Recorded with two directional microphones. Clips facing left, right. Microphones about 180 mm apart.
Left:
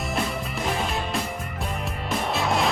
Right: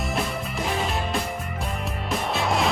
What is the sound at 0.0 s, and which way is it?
Music, centre (ahead or behind).